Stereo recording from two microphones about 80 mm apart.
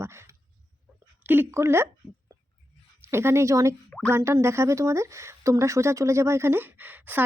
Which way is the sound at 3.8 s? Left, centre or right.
Centre.